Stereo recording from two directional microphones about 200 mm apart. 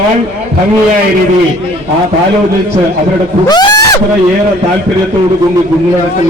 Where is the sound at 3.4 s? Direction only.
20° left (ahead or behind).